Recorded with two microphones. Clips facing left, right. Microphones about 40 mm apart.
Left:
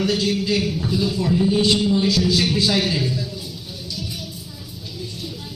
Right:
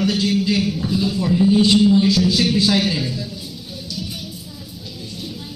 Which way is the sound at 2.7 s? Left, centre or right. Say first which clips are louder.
Right 2 dB; centre.